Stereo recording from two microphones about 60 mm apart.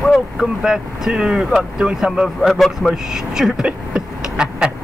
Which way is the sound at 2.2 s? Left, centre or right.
Centre.